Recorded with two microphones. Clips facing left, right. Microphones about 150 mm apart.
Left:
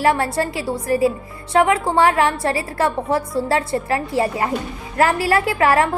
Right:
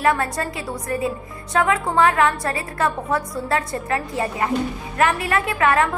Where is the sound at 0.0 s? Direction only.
30° left (ahead or behind).